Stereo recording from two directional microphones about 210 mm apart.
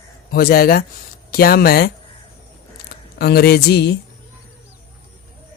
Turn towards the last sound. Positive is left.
turn(degrees=50)  # may be behind; listen again after turning